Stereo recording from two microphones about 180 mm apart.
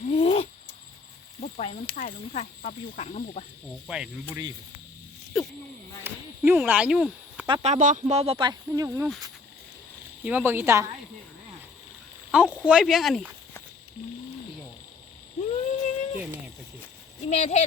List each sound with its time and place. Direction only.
0.1 s owl: 35° left (ahead or behind)
1.4 s cricket: 40° left (ahead or behind)
2.0 s speech: 40° left (ahead or behind)
3.8 s speech: 5° right (ahead or behind)
5.3 s a sound: centre (ahead or behind)
6.0 s a sound: 10° right (ahead or behind)
7.4 s speech: 35° right (ahead or behind)
10.2 s speech: 10° right (ahead or behind)
12.3 s speech: 5° right (ahead or behind)
15.4 s a sound: 40° left (ahead or behind)
17.2 s speech: 40° left (ahead or behind)